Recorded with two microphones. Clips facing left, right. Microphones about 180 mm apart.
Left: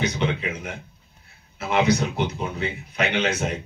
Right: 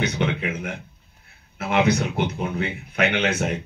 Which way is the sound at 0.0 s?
55° right (ahead or behind).